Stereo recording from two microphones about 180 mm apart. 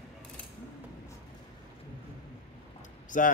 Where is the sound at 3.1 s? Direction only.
45° left (ahead or behind).